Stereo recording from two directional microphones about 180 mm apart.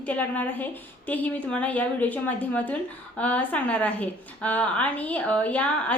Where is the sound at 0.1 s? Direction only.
10° left (ahead or behind).